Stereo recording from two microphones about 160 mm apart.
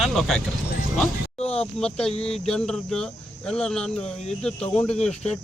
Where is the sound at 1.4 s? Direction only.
40° left (ahead or behind).